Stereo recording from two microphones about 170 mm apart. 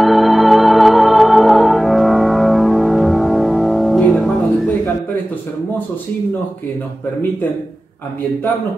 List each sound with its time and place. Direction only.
0.0 s music: centre (ahead or behind)